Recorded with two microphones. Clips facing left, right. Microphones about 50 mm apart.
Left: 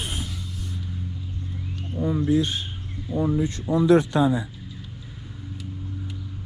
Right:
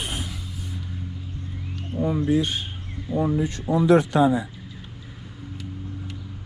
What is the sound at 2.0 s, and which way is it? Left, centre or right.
Speech, right.